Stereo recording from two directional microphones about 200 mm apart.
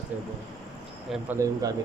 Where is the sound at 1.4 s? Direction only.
20° right (ahead or behind).